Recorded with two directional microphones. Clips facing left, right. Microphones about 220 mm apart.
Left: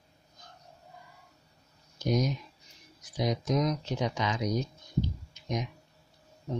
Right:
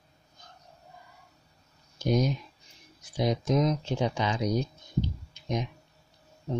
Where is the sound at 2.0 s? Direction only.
30° right (ahead or behind).